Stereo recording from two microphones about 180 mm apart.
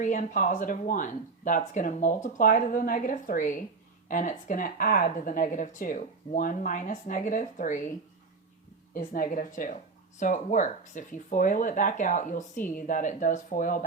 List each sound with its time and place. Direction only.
0.0 s speech: 45° left (ahead or behind)
9.0 s speech: 50° left (ahead or behind)